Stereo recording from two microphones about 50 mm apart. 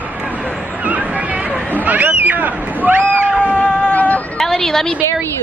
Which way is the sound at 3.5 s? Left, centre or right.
Left.